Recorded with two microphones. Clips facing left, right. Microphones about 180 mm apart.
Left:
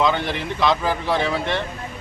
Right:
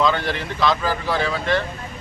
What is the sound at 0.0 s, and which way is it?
Speech, 20° left (ahead or behind).